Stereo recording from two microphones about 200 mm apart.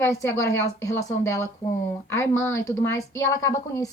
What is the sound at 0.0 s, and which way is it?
Speech, 15° left (ahead or behind).